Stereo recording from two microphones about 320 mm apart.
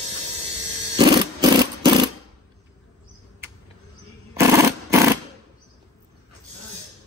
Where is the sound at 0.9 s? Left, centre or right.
Centre.